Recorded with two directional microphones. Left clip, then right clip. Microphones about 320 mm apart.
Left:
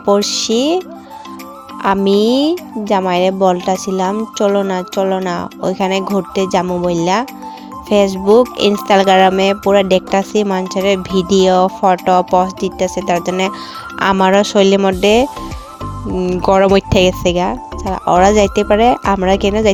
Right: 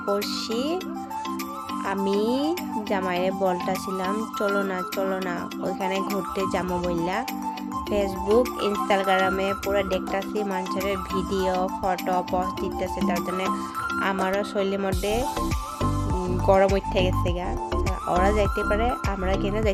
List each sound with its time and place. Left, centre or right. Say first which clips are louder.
0.0 s speech: left 13 dB; left
1.8 s speech: left 13 dB; left
16.5 s speech: left 9 dB; left